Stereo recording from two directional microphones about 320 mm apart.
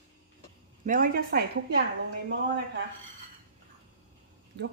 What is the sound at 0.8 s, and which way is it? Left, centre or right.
Speech, right.